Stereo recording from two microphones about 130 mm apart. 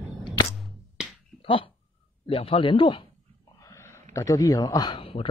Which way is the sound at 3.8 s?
20° left (ahead or behind).